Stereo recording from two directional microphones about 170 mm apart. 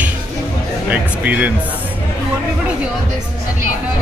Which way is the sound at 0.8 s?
10° right (ahead or behind).